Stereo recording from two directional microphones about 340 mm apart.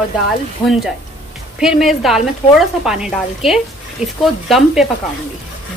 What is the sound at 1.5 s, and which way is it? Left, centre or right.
A woman's voice, centre.